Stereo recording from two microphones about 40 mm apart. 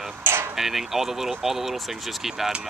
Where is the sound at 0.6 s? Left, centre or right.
Centre.